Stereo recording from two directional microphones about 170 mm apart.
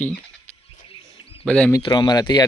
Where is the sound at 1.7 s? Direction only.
25° left (ahead or behind).